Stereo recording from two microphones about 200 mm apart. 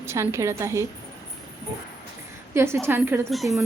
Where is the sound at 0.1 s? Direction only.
15° right (ahead or behind).